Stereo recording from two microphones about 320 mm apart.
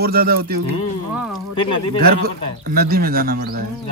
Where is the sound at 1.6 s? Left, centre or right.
Centre.